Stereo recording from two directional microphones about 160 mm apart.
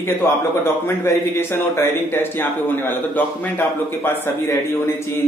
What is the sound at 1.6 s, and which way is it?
A man's voice, 15° left (ahead or behind).